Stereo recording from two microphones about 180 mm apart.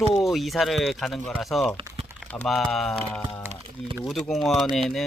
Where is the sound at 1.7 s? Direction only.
30° right (ahead or behind).